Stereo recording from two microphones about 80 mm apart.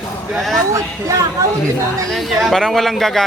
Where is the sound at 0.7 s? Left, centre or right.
Right.